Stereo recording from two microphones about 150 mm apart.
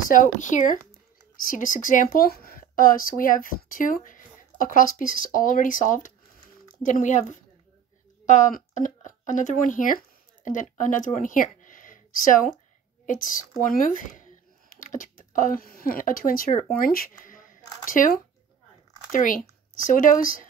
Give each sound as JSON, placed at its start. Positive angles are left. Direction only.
{"t": 0.1, "sound": "speech", "side_deg": 60}
{"t": 1.3, "sound": "speech", "side_deg": 65}
{"t": 13.6, "sound": "a sound", "side_deg": 60}
{"t": 16.7, "sound": "speech", "side_deg": 75}